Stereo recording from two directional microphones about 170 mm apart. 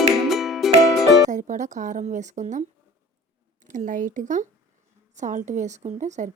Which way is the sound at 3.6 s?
50° right (ahead or behind).